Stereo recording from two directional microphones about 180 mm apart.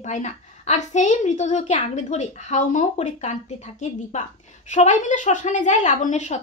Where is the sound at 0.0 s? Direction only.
40° left (ahead or behind).